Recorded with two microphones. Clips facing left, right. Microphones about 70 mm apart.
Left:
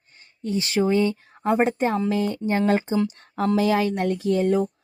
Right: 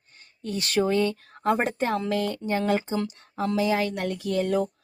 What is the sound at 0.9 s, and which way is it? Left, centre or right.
A woman's voice, centre.